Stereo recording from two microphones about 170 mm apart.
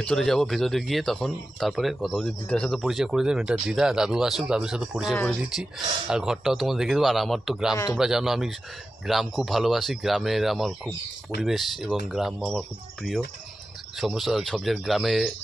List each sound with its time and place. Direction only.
0.0 s speech: 5° left (ahead or behind)
7.7 s a man's voice: 20° left (ahead or behind)
8.0 s speech: 5° right (ahead or behind)